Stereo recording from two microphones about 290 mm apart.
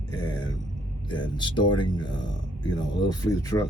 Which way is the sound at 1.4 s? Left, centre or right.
Centre.